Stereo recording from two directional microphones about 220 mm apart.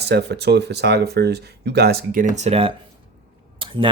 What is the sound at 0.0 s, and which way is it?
Speech, 50° right (ahead or behind).